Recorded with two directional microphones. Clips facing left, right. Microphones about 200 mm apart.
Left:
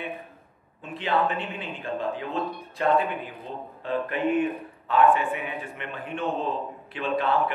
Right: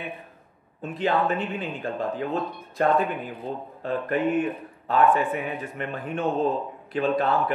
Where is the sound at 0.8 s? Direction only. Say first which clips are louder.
Right 2 dB; 45° right (ahead or behind).